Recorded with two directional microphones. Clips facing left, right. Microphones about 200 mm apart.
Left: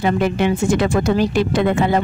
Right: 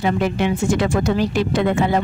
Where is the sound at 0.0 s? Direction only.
55° left (ahead or behind).